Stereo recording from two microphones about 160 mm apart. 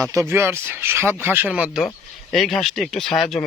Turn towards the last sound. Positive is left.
turn(degrees=0)  # may be behind; listen again after turning